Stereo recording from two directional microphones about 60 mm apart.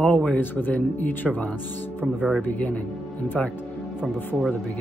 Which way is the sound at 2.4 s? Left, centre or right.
Left.